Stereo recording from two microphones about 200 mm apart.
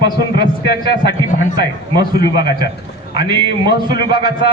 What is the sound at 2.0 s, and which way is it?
Speech, 20° right (ahead or behind).